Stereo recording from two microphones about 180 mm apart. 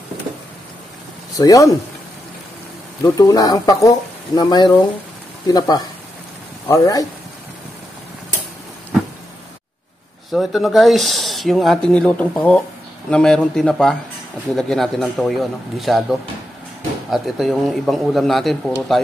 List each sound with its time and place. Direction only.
1.4 s speech: 20° left (ahead or behind)
3.0 s speech: 20° left (ahead or behind)
10.3 s speech: centre (ahead or behind)